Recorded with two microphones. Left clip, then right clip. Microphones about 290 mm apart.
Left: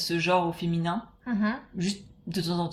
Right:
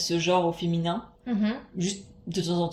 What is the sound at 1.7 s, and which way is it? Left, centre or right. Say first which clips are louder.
Speech: right 1 dB; left.